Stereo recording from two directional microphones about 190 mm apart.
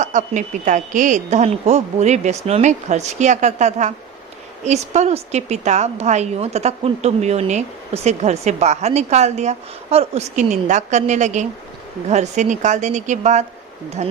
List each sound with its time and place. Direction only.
0.0 s a woman's voice: 40° right (ahead or behind)